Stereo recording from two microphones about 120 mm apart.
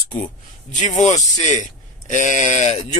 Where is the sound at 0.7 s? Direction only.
85° left.